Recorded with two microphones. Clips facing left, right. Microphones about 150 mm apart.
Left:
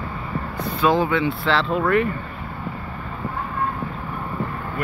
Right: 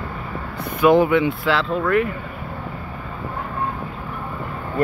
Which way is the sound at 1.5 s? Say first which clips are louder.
Left 1 dB; centre (ahead or behind).